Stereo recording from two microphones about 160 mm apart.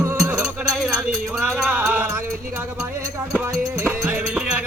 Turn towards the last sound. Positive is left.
turn(degrees=-10)  # may be behind; listen again after turning